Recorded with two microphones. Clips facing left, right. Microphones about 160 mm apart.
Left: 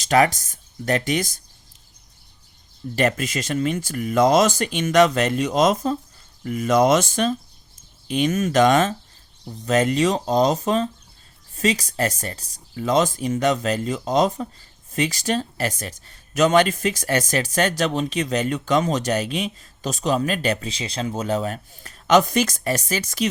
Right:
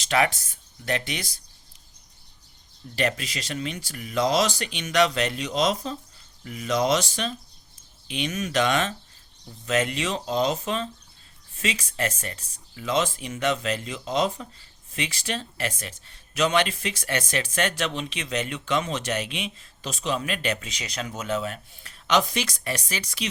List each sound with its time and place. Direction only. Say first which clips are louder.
0.0 s speech: left 6 dB; 45° left (ahead or behind)
2.9 s speech: left 6 dB; 45° left (ahead or behind)